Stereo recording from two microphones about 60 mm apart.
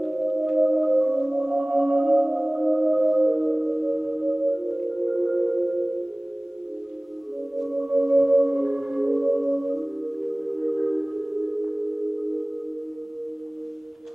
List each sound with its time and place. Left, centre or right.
0.0 s singing bowl: centre
7.5 s music: centre